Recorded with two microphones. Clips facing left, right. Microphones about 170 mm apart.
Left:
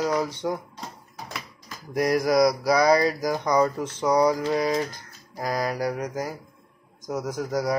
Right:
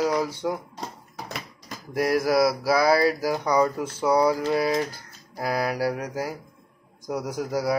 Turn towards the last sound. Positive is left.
turn(degrees=-10)  # may be behind; listen again after turning